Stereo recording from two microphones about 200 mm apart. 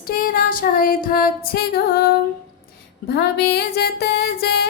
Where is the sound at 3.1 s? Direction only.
55° left (ahead or behind).